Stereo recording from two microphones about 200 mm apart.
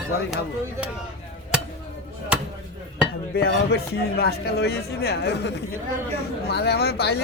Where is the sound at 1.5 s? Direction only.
5° right (ahead or behind).